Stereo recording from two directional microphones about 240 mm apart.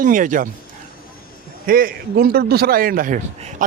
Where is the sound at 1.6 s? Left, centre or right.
Right.